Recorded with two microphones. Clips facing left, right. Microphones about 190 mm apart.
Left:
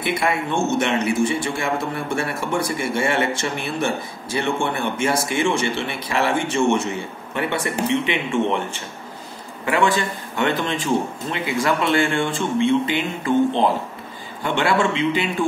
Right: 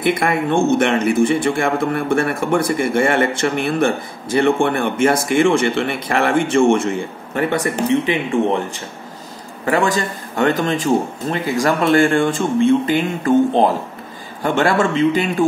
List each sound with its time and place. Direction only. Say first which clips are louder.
0.0 s a man's voice: right 5 dB; 55° right (ahead or behind)
7.6 s a man's voice: right 4 dB; 35° right (ahead or behind)